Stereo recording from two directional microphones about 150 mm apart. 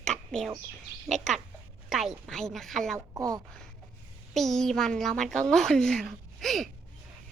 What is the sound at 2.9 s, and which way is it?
Speech, 20° right (ahead or behind).